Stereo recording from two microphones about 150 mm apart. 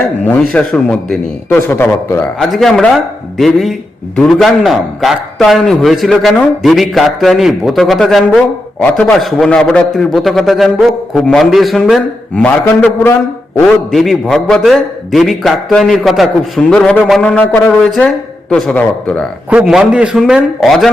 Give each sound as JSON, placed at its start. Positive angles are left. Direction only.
{"t": 0.5, "sound": "speech", "side_deg": 5}
{"t": 2.4, "sound": "a man's voice", "side_deg": 0}
{"t": 17.2, "sound": "speech", "side_deg": 10}
{"t": 19.5, "sound": "a man's voice", "side_deg": -5}